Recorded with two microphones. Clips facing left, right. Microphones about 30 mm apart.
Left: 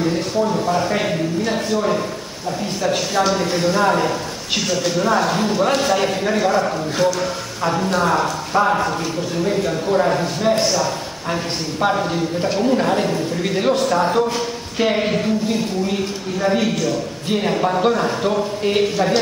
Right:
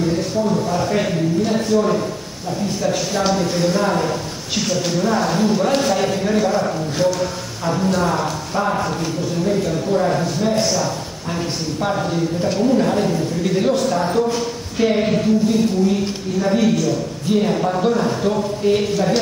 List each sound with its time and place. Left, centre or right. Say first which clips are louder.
0.0 s a man's voice: even; centre
4.6 s speech: even; centre
5.4 s a man's voice: right 1 dB; centre
12.1 s a man's voice: even; left